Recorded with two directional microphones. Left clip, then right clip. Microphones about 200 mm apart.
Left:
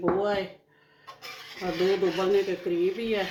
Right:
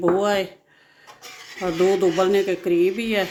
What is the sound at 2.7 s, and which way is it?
Speech, 55° right (ahead or behind).